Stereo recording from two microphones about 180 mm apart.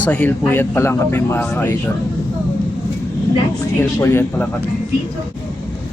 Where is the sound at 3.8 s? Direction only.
15° left (ahead or behind).